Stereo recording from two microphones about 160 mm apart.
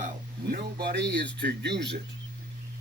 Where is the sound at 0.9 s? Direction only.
90° right.